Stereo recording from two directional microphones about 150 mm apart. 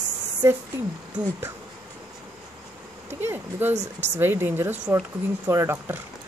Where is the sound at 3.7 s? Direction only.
50° right (ahead or behind).